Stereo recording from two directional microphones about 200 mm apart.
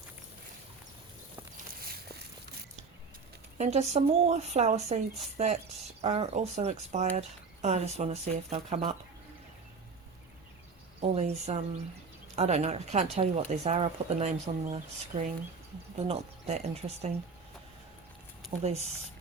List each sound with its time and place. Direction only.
1.8 s walk: 50° right (ahead or behind)
3.6 s speech: 35° right (ahead or behind)
6.0 s speech: 30° right (ahead or behind)
11.1 s speech: 35° right (ahead or behind)
18.6 s speech: 30° right (ahead or behind)